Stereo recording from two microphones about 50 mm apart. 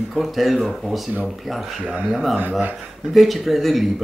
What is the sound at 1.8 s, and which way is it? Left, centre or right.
Speech, right.